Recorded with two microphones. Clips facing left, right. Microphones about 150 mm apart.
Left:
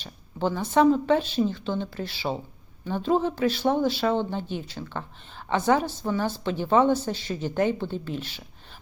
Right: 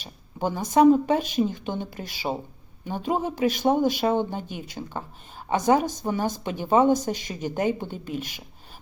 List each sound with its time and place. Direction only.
0.0 s a woman's voice: 10° right (ahead or behind)